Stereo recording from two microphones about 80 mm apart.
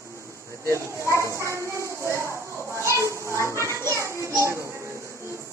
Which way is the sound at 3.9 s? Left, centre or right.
Right.